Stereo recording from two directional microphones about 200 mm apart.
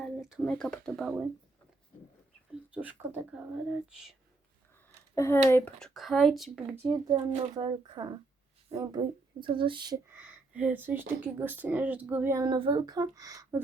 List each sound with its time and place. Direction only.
0.0 s speech: centre (ahead or behind)
2.7 s speech: 10° right (ahead or behind)
5.1 s speech: 15° left (ahead or behind)
6.8 s speech: 20° right (ahead or behind)
10.1 s speech: 10° right (ahead or behind)